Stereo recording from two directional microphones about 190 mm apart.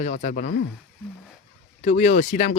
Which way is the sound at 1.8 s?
40° left (ahead or behind).